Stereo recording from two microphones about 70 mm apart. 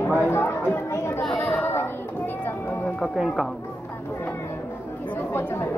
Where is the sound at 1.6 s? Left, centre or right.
Left.